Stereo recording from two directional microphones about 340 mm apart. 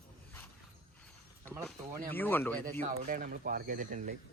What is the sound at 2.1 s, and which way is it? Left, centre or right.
Speech, centre.